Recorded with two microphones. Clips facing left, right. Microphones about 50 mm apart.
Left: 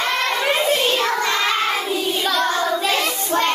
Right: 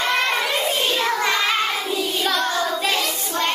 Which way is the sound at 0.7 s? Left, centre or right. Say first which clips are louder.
Left 3 dB; left.